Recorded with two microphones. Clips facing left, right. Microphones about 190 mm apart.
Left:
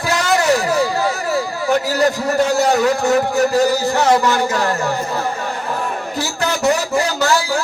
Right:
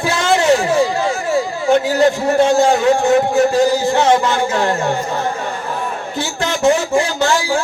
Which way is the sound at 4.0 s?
20° right (ahead or behind).